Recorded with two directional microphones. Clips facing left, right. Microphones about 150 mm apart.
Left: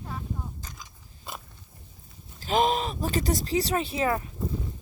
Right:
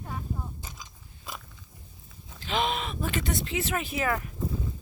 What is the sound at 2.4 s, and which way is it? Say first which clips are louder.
Speech: left 5 dB; 40° left (ahead or behind).